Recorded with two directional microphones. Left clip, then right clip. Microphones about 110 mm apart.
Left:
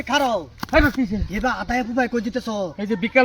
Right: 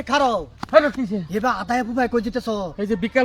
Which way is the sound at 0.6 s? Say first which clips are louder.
Right 4 dB; 65° left (ahead or behind).